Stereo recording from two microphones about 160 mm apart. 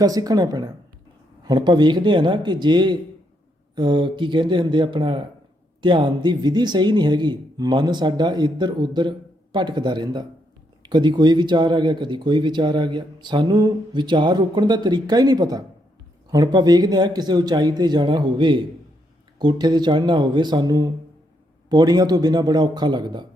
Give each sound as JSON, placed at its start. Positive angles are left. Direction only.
{"t": 0.0, "sound": "speech", "side_deg": -25}